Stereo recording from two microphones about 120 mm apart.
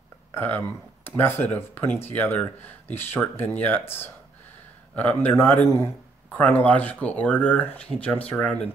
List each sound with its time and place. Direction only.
0.3 s speech: 15° left (ahead or behind)